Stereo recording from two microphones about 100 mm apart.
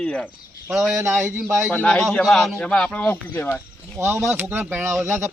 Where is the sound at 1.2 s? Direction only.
25° right (ahead or behind).